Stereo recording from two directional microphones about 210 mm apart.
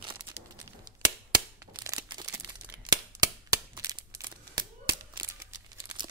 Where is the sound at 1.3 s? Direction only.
15° right (ahead or behind).